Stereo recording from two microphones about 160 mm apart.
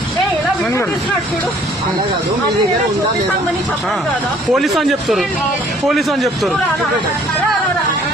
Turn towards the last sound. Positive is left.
turn(degrees=0)  # may be behind; listen again after turning